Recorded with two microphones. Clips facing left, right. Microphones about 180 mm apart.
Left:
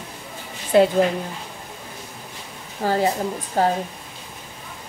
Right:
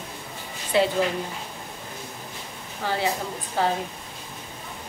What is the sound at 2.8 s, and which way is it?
Speech, 40° left (ahead or behind).